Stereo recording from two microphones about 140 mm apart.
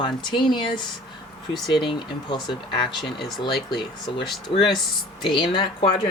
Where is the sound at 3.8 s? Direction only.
30° left (ahead or behind).